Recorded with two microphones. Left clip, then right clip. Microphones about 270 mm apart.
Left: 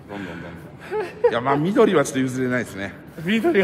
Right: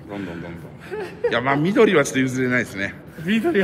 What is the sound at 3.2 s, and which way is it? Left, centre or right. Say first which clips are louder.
Speech: left 1 dB; left.